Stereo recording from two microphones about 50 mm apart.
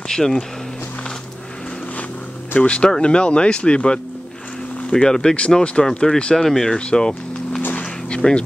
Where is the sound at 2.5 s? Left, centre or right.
Left.